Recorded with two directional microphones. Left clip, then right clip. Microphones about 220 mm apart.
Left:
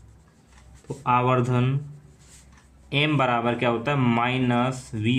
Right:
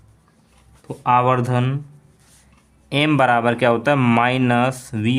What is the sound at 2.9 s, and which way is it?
Speech, 45° right (ahead or behind).